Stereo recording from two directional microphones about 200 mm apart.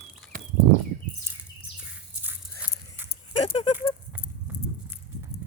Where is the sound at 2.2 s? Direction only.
10° right (ahead or behind).